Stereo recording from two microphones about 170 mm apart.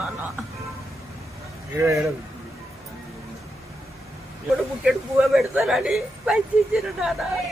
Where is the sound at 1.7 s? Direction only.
15° right (ahead or behind).